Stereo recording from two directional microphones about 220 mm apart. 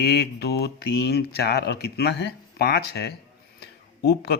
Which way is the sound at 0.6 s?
50° left (ahead or behind).